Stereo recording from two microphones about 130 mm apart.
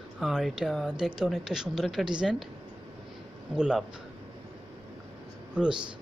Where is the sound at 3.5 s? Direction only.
5° right (ahead or behind).